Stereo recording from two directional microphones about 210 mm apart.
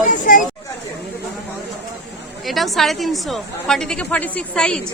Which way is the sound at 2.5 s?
Centre (ahead or behind).